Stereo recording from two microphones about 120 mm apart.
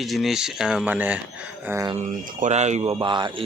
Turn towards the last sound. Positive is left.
turn(degrees=-40)  # may be behind; listen again after turning